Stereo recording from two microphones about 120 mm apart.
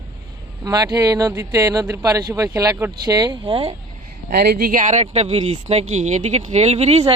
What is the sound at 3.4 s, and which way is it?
Speech, 50° right (ahead or behind).